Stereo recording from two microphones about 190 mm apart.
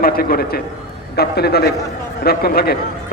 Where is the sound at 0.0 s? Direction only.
50° left (ahead or behind).